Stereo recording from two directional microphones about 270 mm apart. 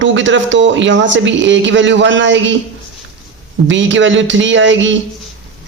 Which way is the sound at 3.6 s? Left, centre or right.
Right.